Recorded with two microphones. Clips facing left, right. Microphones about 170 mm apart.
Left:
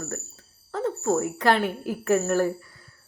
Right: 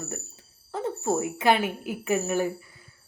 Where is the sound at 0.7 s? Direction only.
15° right (ahead or behind).